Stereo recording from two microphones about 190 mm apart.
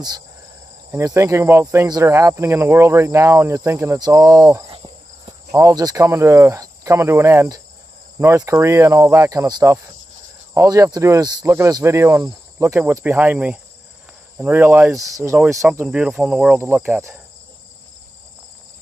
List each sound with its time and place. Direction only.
0.9 s speech: 15° right (ahead or behind)
4.6 s cricket: 30° right (ahead or behind)
5.5 s speech: 15° right (ahead or behind)